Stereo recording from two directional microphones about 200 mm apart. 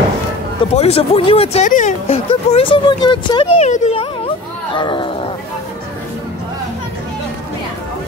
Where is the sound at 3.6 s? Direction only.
35° left (ahead or behind).